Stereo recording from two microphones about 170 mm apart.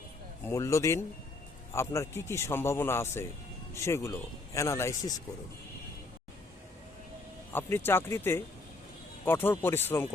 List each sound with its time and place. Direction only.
0.4 s a man's voice: 15° left (ahead or behind)
7.5 s a man's voice: 15° left (ahead or behind)